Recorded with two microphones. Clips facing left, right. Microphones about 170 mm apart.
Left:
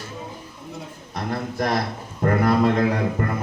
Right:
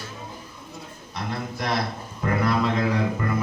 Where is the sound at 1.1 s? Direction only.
45° left (ahead or behind).